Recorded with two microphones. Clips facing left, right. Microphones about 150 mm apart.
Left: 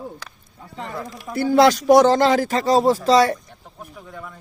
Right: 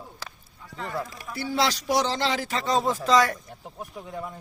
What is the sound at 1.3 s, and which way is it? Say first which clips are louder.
Speech: left 11 dB; 45° left (ahead or behind).